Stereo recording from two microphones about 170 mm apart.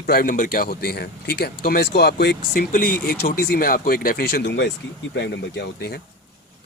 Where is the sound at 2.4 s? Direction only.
60° left (ahead or behind); by 6.0 s 75° left (ahead or behind).